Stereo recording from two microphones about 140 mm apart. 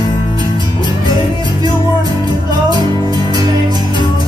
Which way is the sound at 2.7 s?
30° right (ahead or behind).